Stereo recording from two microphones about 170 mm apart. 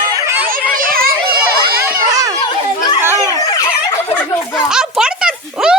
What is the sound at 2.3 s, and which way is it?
Children playing, 25° left (ahead or behind).